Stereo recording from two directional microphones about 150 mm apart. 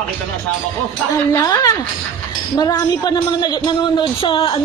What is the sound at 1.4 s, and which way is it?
Speech, 25° left (ahead or behind).